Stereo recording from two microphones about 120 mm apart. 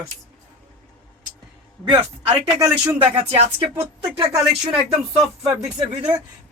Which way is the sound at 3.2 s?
60° right (ahead or behind).